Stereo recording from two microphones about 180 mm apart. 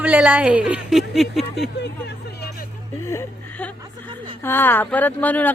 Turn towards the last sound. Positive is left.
turn(degrees=10)  # may be behind; listen again after turning